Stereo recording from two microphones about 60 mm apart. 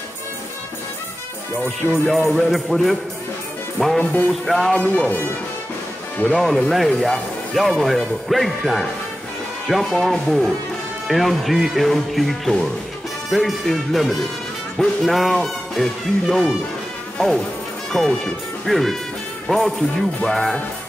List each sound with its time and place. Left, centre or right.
1.8 s speech: centre
4.0 s music: left
4.7 s speech: centre
6.3 s speech: centre
17.9 s speech: centre